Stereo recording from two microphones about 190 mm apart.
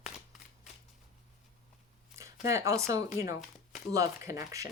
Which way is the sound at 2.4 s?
15° right (ahead or behind).